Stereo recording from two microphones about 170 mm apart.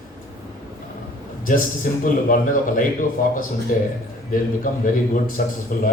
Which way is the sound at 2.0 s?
50° left (ahead or behind).